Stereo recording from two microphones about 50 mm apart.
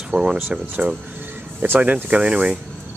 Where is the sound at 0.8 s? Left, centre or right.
Right.